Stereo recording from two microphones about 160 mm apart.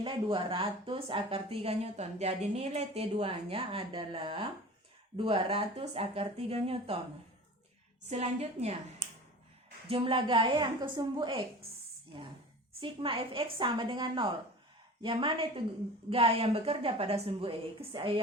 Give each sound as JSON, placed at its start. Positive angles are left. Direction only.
{"t": 0.0, "sound": "a woman's voice", "side_deg": -35}
{"t": 8.1, "sound": "a woman's voice", "side_deg": -40}
{"t": 12.8, "sound": "a woman's voice", "side_deg": -35}